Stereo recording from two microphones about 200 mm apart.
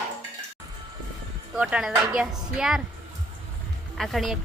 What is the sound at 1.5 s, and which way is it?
A woman's voice, 5° right (ahead or behind).